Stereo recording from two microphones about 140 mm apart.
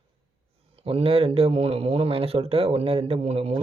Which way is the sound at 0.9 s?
45° right (ahead or behind).